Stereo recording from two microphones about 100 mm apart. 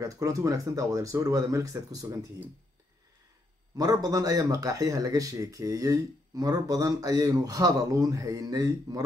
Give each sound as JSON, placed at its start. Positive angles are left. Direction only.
{"t": 0.0, "sound": "speech", "side_deg": -35}
{"t": 3.7, "sound": "speech", "side_deg": -40}